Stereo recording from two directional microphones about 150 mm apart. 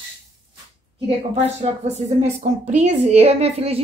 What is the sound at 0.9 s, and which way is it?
A woman's voice, 40° right (ahead or behind).